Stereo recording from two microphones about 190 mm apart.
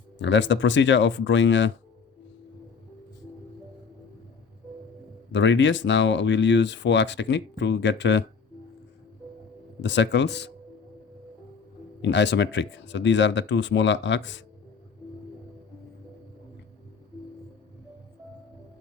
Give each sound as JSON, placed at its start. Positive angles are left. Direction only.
{"t": 0.2, "sound": "speech", "side_deg": 75}
{"t": 5.3, "sound": "speech", "side_deg": 75}
{"t": 9.8, "sound": "speech", "side_deg": 70}
{"t": 12.0, "sound": "speech", "side_deg": 65}